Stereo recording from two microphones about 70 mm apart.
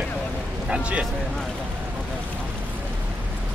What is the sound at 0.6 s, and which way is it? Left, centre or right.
Speech, centre.